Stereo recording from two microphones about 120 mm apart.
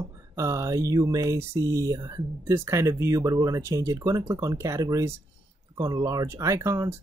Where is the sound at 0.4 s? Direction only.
25° right (ahead or behind).